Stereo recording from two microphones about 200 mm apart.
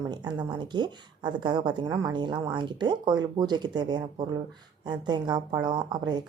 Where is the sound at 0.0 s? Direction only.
20° right (ahead or behind).